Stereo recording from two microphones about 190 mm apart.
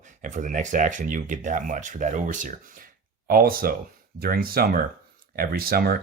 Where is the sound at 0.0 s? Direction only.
40° right (ahead or behind).